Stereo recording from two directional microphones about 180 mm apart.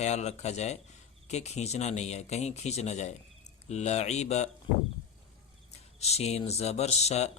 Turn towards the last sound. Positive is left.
turn(degrees=35)  # may be behind; listen again after turning